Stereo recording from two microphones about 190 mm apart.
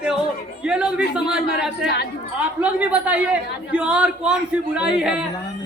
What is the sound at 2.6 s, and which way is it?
A man's voice, 5° right (ahead or behind).